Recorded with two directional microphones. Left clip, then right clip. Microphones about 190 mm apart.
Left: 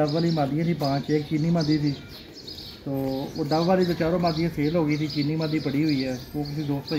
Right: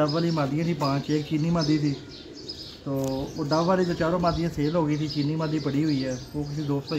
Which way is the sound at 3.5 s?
15° right (ahead or behind).